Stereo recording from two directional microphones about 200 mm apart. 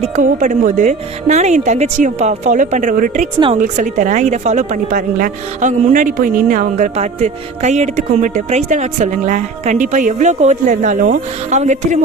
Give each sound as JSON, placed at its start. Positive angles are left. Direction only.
{"t": 0.2, "sound": "a woman's voice", "side_deg": -40}